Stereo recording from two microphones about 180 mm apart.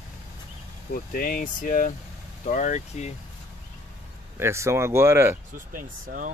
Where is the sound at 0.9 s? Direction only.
50° left (ahead or behind).